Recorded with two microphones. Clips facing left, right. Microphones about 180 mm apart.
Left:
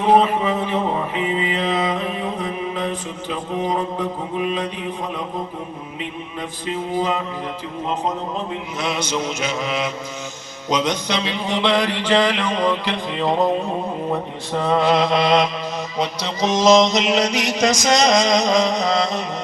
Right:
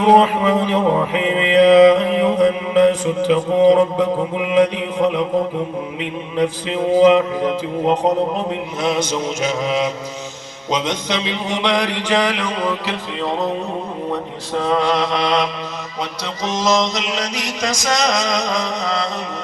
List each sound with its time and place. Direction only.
0.0 s music: 90° right
1.6 s mantra: 85° right
6.3 s music: 90° right
8.8 s mantra: 50° right (ahead or behind)
10.7 s mantra: 25° right (ahead or behind); by 12.9 s 10° right (ahead or behind)
14.7 s mantra: 5° left (ahead or behind)
16.5 s mantra: 20° left (ahead or behind)
17.7 s chant: 20° left (ahead or behind)